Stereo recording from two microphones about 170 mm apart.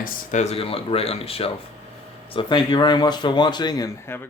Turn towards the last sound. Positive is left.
turn(degrees=20)  # may be behind; listen again after turning